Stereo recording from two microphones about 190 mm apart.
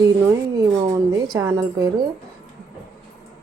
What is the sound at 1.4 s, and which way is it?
Speech, 15° right (ahead or behind).